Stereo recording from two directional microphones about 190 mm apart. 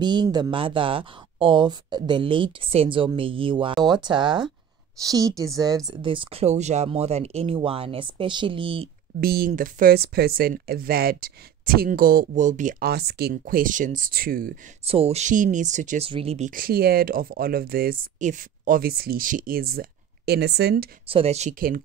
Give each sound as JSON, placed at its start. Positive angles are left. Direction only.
{"t": 0.0, "sound": "a woman's voice", "side_deg": -25}
{"t": 9.2, "sound": "speech", "side_deg": -55}
{"t": 14.9, "sound": "speech", "side_deg": -30}
{"t": 21.1, "sound": "speech", "side_deg": -30}